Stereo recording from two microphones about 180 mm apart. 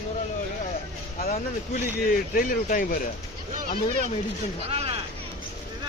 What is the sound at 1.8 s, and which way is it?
Speech, 50° left (ahead or behind).